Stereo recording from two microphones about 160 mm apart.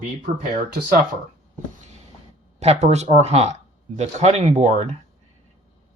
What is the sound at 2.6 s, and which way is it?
Speech, 45° right (ahead or behind).